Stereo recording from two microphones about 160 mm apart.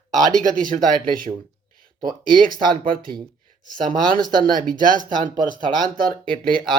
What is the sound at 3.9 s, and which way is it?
Speech, 60° right (ahead or behind).